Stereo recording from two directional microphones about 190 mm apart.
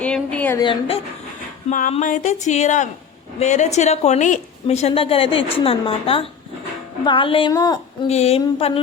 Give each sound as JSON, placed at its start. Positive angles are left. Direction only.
{"t": 0.0, "sound": "a sound", "side_deg": 5}
{"t": 0.6, "sound": "a woman's voice", "side_deg": 30}
{"t": 1.7, "sound": "a woman's voice", "side_deg": 40}
{"t": 8.0, "sound": "speech", "side_deg": 35}